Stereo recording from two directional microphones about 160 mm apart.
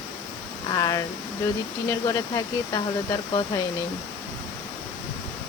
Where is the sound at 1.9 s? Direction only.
20° left (ahead or behind).